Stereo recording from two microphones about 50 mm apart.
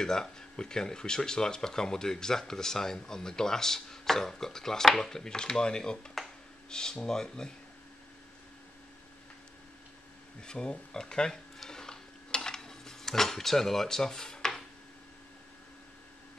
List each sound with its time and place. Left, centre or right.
0.0 s speech: centre
10.4 s speech: centre
11.6 s a sound: centre